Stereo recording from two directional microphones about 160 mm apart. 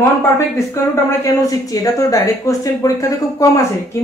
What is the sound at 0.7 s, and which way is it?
Speech, 20° left (ahead or behind).